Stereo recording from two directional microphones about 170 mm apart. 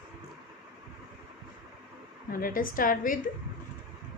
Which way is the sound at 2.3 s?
60° left (ahead or behind).